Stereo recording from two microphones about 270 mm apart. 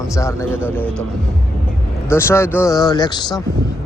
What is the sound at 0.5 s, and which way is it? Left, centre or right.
Speech, centre.